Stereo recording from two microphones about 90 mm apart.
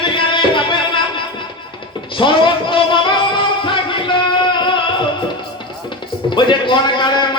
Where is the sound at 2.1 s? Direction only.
65° left (ahead or behind).